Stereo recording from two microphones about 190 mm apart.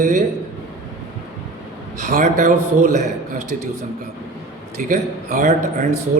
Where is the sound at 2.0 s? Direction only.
40° right (ahead or behind).